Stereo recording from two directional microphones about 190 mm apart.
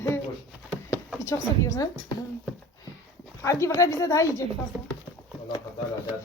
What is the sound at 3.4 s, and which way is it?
Speech, 15° left (ahead or behind).